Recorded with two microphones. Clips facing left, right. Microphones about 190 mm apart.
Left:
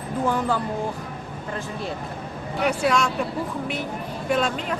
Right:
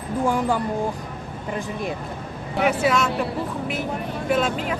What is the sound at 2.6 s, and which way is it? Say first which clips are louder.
Speech: right 1 dB; 5° right (ahead or behind).